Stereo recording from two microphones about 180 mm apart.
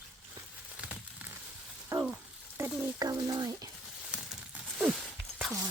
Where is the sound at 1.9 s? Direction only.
10° right (ahead or behind).